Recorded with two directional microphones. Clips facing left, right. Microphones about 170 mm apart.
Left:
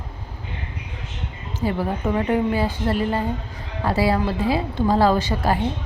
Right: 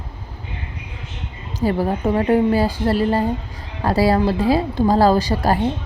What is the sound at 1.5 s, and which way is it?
A woman's voice, 40° right (ahead or behind).